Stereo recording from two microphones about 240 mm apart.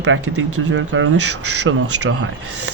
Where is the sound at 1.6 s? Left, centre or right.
Right.